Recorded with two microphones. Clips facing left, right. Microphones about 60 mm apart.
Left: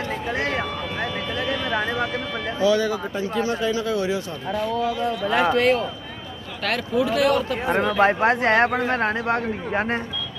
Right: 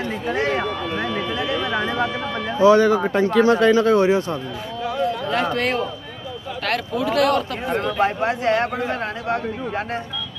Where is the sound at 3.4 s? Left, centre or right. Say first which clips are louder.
Right 9 dB; right.